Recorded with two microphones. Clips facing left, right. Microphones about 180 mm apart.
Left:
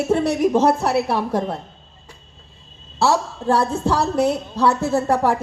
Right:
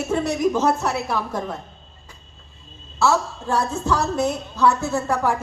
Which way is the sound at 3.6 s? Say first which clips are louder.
Left 3 dB; 35° left (ahead or behind).